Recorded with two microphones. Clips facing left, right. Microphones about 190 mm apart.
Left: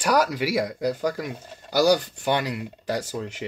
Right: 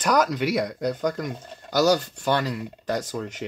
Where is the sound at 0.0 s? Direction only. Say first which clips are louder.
Even; 5° left (ahead or behind).